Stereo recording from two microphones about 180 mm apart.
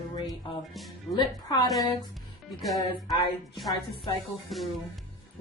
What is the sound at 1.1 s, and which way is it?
Speech, 20° left (ahead or behind).